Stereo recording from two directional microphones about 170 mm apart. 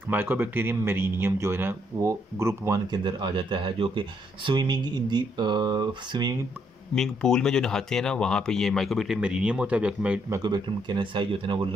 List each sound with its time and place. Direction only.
0.1 s speech: 10° right (ahead or behind)
7.0 s speech: 5° left (ahead or behind)
10.3 s speech: 25° right (ahead or behind)